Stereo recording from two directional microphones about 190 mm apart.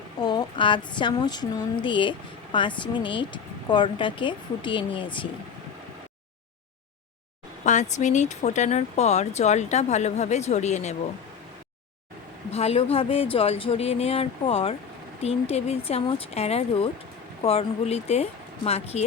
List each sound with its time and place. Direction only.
0.2 s speech: 20° left (ahead or behind)
7.6 s speech: 40° left (ahead or behind)
12.5 s speech: 35° left (ahead or behind)